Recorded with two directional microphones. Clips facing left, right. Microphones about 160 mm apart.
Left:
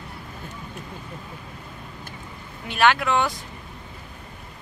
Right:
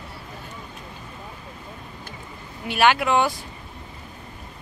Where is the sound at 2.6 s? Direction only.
5° right (ahead or behind).